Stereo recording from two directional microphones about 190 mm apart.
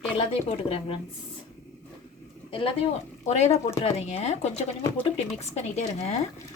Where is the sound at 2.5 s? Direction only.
30° left (ahead or behind).